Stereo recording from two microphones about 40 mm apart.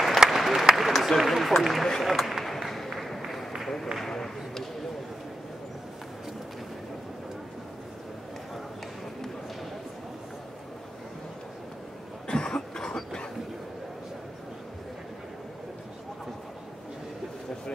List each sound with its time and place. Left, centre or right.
0.3 s applause: centre
0.7 s speech: centre
2.0 s a sound: centre
3.6 s run: centre
4.0 s a sound: centre
12.3 s cough: centre